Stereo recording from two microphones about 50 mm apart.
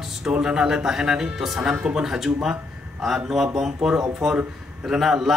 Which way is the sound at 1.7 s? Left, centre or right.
Centre.